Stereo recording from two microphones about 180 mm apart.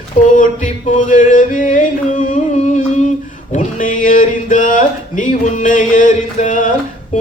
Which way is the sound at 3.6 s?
45° left (ahead or behind).